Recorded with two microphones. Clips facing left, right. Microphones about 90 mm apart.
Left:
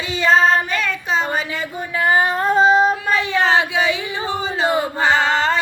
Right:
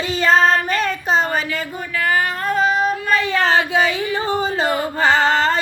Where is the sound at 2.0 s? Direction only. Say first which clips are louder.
Left 3 dB; 25° left (ahead or behind).